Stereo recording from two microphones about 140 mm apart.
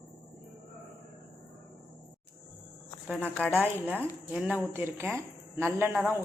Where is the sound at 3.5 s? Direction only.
10° right (ahead or behind).